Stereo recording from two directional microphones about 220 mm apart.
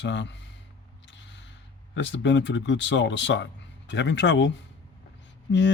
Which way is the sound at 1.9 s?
55° left (ahead or behind).